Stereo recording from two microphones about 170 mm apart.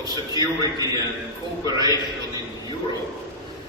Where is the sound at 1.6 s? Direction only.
20° right (ahead or behind).